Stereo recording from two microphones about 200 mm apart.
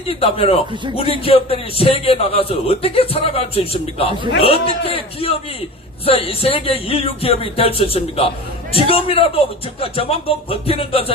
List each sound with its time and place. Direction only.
0.1 s a man's voice: 30° left (ahead or behind)